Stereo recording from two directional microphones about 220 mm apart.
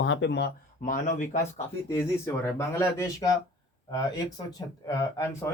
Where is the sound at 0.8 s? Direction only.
35° left (ahead or behind).